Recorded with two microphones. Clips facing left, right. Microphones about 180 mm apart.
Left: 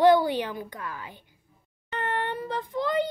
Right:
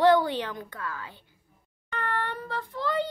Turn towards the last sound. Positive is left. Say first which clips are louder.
# left 3 dB
turn(degrees=15)  # may be behind; listen again after turning